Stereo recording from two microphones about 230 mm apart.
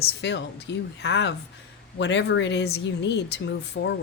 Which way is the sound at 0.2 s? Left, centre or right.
Left.